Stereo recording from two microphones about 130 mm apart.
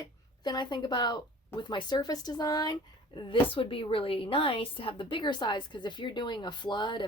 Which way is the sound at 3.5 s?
45° left (ahead or behind).